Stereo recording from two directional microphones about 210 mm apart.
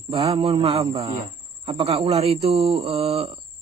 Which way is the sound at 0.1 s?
25° right (ahead or behind).